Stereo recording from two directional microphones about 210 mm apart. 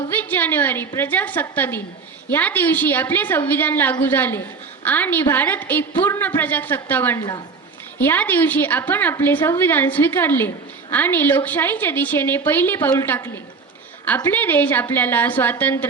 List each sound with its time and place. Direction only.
0.1 s a woman's voice: 10° left (ahead or behind)
7.2 s a woman's voice: 20° left (ahead or behind)
7.9 s a woman's voice: 10° left (ahead or behind)